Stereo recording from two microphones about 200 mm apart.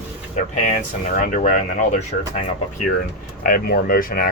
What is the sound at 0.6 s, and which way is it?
Speech, 35° left (ahead or behind).